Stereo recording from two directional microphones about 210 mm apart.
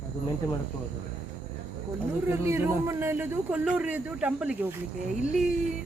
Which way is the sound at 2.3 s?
10° right (ahead or behind).